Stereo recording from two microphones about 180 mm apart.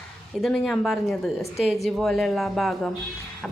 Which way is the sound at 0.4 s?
Centre (ahead or behind).